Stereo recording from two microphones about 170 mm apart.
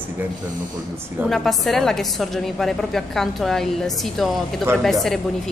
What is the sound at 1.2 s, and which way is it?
A woman's voice, centre (ahead or behind).